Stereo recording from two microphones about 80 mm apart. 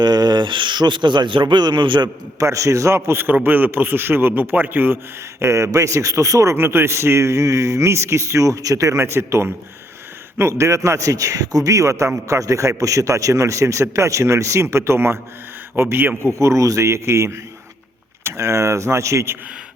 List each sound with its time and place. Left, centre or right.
0.0 s speech: right
2.4 s a man's voice: right
5.4 s a man's voice: right
16.3 s a man's voice: right